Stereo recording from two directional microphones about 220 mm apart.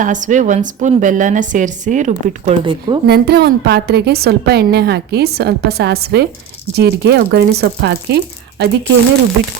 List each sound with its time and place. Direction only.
0.0 s a woman's voice: 35° right (ahead or behind)
2.6 s speech: 20° right (ahead or behind)
3.1 s a woman's voice: 45° right (ahead or behind)